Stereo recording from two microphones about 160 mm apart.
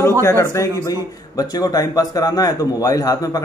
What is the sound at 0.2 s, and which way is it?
A man's voice, 15° left (ahead or behind).